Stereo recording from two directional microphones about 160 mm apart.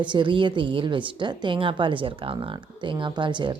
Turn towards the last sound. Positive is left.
turn(degrees=-30)  # may be behind; listen again after turning